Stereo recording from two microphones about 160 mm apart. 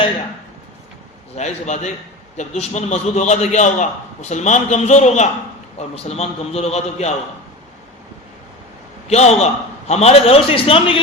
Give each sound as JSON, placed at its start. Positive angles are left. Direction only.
{"t": 1.4, "sound": "a man's voice", "side_deg": 45}
{"t": 9.0, "sound": "a man's voice", "side_deg": 40}